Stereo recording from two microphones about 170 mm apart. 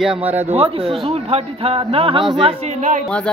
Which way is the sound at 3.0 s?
5° left (ahead or behind).